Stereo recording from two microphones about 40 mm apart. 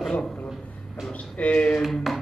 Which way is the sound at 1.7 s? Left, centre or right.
Centre.